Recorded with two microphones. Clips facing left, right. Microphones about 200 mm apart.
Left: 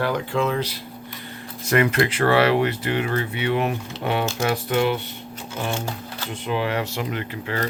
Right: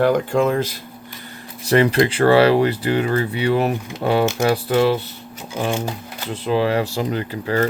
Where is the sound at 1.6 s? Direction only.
30° right (ahead or behind).